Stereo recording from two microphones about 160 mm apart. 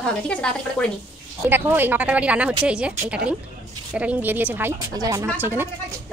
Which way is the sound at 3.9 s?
10° right (ahead or behind).